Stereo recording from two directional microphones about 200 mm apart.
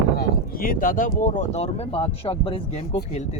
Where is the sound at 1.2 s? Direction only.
40° left (ahead or behind).